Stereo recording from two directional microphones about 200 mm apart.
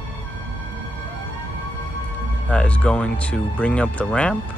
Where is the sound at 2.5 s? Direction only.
5° left (ahead or behind).